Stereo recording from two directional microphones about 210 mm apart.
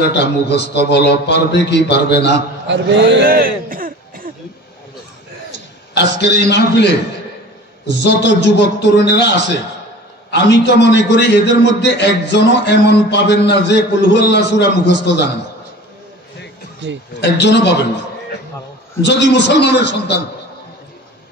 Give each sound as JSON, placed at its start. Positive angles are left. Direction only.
{"t": 0.0, "sound": "a man's voice", "side_deg": 55}
{"t": 2.6, "sound": "a man's voice", "side_deg": -55}
{"t": 5.9, "sound": "a man's voice", "side_deg": 55}
{"t": 16.8, "sound": "speech", "side_deg": -55}
{"t": 17.2, "sound": "a man's voice", "side_deg": 55}
{"t": 19.0, "sound": "a man's voice", "side_deg": 55}